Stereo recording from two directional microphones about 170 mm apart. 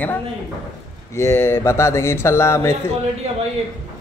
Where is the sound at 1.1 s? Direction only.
15° left (ahead or behind).